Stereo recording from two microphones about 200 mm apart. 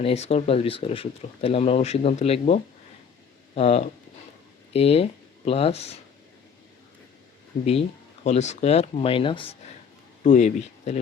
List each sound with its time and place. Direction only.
0.0 s speech: 30° left (ahead or behind)
7.6 s speech: 30° left (ahead or behind)
10.2 s speech: 35° left (ahead or behind)